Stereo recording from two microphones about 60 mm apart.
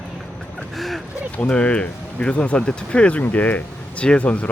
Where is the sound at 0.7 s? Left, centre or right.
Centre.